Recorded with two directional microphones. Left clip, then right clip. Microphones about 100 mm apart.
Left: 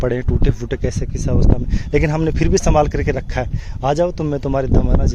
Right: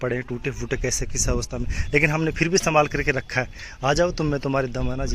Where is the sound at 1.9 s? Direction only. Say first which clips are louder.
Left 3 dB; 50° left (ahead or behind).